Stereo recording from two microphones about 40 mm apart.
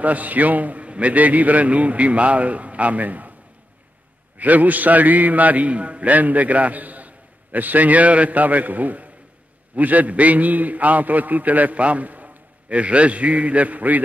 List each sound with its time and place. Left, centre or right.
0.0 s a man's voice: right
4.4 s a man's voice: right